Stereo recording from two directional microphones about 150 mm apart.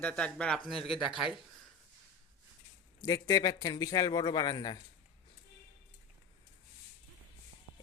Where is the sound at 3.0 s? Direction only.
25° left (ahead or behind).